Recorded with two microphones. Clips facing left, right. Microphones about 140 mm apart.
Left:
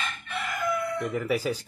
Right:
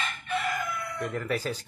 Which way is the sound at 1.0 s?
10° left (ahead or behind).